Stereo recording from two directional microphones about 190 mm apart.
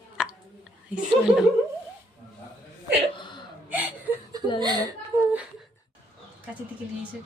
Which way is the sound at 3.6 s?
10° right (ahead or behind).